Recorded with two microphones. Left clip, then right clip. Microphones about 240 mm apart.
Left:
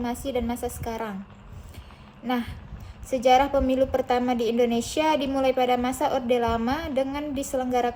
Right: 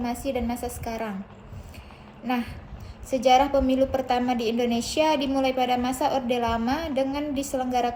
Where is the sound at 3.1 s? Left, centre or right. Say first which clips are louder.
Even; centre.